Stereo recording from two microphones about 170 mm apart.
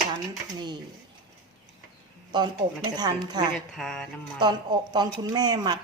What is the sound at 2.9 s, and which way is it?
Speech, 25° right (ahead or behind).